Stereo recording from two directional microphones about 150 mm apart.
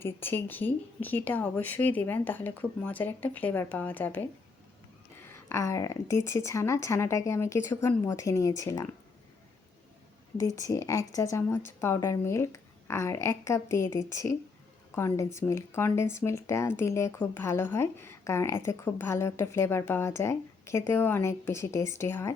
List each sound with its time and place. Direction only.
0.0 s speech: 15° left (ahead or behind)
10.3 s speech: 20° left (ahead or behind)